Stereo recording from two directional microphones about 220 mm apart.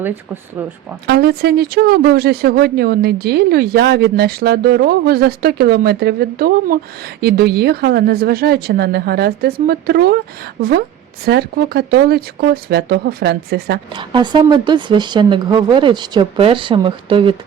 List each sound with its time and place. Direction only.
1.0 s speech: 50° right (ahead or behind)
13.9 s a woman's voice: 20° right (ahead or behind)